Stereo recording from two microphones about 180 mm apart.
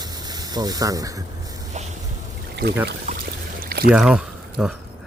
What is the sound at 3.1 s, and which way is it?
Pour, 35° right (ahead or behind).